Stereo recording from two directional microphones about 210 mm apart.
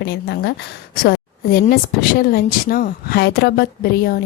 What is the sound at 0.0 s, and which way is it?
Speech, 55° left (ahead or behind).